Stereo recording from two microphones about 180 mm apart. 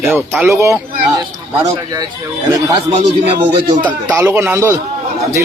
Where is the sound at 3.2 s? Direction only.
30° right (ahead or behind).